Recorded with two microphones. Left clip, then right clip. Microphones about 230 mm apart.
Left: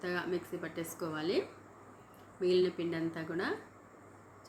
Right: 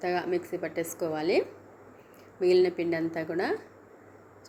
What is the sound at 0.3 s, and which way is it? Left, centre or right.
Speech, left.